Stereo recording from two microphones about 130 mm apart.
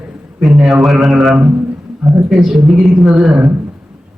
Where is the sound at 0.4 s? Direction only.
Centre (ahead or behind).